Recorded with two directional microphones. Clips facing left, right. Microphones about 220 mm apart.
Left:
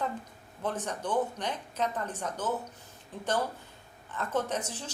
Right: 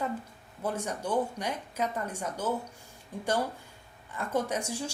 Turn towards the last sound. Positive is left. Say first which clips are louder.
# right 2 dB
turn(degrees=-10)  # may be behind; listen again after turning